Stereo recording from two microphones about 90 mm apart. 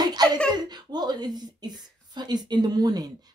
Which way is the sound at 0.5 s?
50° right (ahead or behind).